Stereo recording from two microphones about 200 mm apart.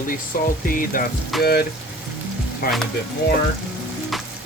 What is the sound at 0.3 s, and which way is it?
Music, 45° left (ahead or behind).